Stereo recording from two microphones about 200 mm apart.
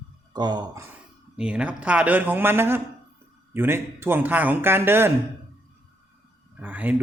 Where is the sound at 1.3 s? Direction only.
5° right (ahead or behind).